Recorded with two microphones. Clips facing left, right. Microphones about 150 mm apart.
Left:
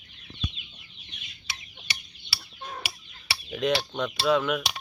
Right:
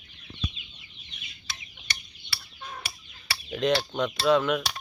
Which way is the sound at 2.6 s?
35° left (ahead or behind).